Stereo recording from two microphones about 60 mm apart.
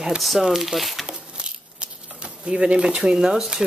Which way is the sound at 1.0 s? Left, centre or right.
Centre.